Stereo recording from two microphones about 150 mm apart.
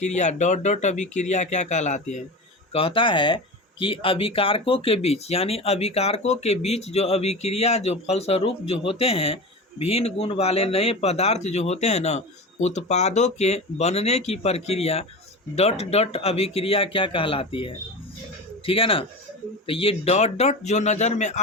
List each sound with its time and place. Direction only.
0.0 s speech: 50° left (ahead or behind)
2.7 s speech: 35° left (ahead or behind); by 21.3 s 50° left (ahead or behind)